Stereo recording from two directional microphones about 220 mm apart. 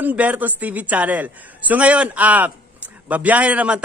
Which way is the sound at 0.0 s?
5° right (ahead or behind).